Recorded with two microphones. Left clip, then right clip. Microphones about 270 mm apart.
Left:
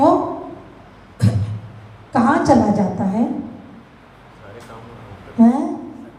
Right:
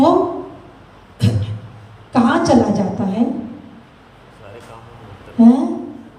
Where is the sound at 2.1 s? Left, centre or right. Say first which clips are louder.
Even; left.